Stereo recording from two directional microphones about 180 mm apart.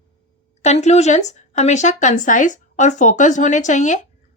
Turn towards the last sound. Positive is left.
turn(degrees=40)  # may be behind; listen again after turning